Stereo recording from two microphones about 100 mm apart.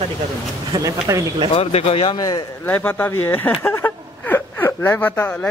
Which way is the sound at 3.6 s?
25° left (ahead or behind).